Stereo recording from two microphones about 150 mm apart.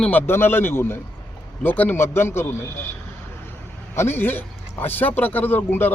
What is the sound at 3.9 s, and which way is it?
Speech, 15° left (ahead or behind).